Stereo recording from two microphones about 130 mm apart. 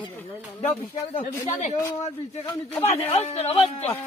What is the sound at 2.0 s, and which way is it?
Speech, 50° left (ahead or behind).